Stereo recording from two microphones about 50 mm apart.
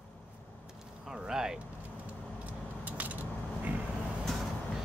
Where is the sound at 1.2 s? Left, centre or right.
Centre.